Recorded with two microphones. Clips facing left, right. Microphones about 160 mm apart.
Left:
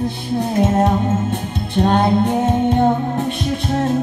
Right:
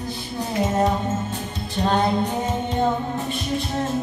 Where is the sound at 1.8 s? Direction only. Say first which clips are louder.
Left 5 dB; 60° left (ahead or behind).